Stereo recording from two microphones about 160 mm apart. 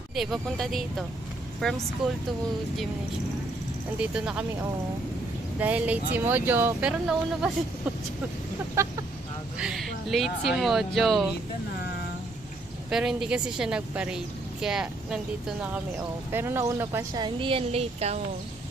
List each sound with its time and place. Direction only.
0.2 s speech: centre (ahead or behind)
4.0 s speech: 5° right (ahead or behind)
5.5 s speech: 10° right (ahead or behind)
8.7 s speech: 15° right (ahead or behind)
9.6 s speech: centre (ahead or behind)
12.9 s speech: 5° right (ahead or behind)
17.2 s speech: 35° right (ahead or behind)